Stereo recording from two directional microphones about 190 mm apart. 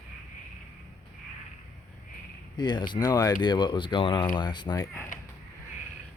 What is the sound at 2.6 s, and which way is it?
Speech, 25° left (ahead or behind).